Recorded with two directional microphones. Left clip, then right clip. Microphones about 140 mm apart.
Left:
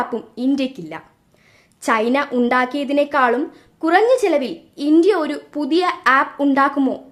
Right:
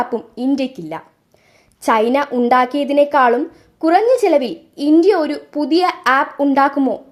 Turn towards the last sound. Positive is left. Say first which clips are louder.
# right 2 dB
turn(degrees=-25)  # may be behind; listen again after turning